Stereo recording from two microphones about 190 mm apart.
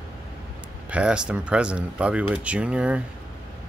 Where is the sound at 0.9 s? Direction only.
5° right (ahead or behind).